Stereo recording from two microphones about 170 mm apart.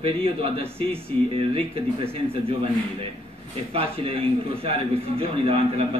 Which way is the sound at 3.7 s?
35° right (ahead or behind).